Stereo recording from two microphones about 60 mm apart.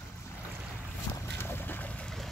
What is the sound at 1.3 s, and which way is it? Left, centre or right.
Boat, left.